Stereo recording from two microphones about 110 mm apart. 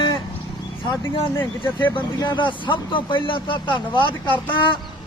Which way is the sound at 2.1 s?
45° left (ahead or behind).